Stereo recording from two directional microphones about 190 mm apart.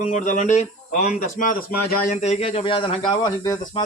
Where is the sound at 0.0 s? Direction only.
40° left (ahead or behind).